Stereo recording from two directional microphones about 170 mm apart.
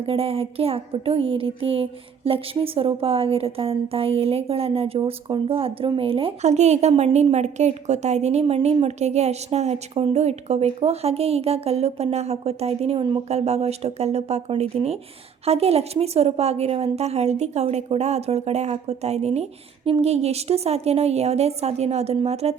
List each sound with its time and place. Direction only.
0.0 s speech: 35° right (ahead or behind)